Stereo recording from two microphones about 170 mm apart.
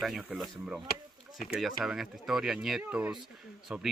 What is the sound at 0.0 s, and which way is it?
Speech, centre (ahead or behind).